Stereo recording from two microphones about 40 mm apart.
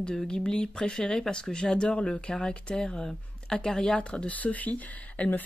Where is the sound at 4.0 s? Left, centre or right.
Left.